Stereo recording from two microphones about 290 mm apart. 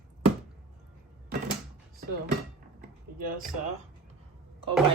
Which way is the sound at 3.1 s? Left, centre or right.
Right.